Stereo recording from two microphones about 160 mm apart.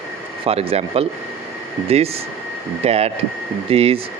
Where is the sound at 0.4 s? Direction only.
35° right (ahead or behind).